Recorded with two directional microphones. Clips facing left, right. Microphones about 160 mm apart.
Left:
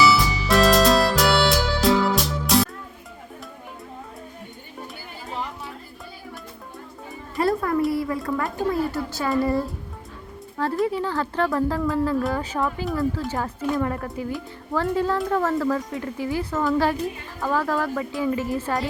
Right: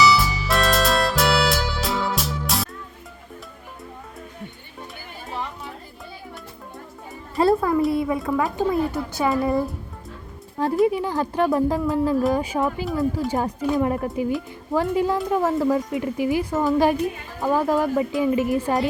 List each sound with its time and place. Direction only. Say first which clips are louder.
0.0 s music: even; centre (ahead or behind)
7.3 s music: right 4 dB; 25° right (ahead or behind)
7.9 s a sound: right 2 dB; 20° right (ahead or behind)
8.5 s a woman's voice: right 2 dB; 20° right (ahead or behind)
10.6 s a woman's voice: right 4 dB; 15° right (ahead or behind)